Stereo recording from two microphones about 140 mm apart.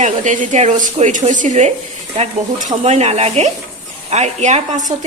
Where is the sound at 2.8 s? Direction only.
50° right (ahead or behind).